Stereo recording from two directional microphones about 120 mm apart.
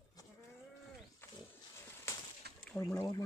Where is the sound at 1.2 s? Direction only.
20° left (ahead or behind).